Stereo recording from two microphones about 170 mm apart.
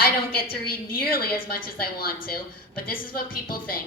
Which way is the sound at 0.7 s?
60° left (ahead or behind).